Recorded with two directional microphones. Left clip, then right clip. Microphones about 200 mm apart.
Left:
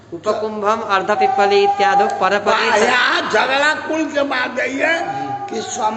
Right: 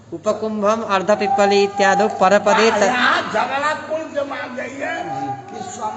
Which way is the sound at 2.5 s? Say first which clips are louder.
Left 1 dB; 50° left (ahead or behind).